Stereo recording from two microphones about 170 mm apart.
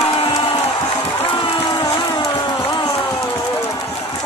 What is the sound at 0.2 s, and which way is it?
Crowd, 30° left (ahead or behind).